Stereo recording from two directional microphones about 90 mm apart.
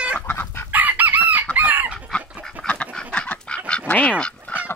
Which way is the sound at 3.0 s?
10° left (ahead or behind).